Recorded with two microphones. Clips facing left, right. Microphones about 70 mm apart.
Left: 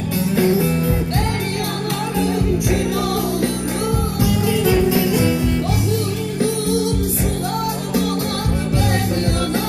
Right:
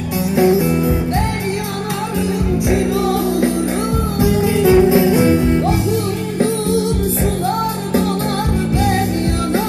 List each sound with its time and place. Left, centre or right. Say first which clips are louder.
0.4 s music: right 5 dB; centre
4.2 s music: right 5 dB; right